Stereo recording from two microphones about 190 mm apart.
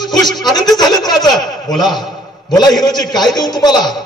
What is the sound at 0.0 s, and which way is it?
Speech, 20° left (ahead or behind).